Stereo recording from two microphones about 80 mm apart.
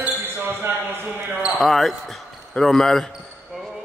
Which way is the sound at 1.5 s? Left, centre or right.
Centre.